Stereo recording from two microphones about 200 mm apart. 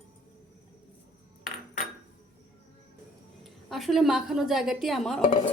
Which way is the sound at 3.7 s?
Centre (ahead or behind).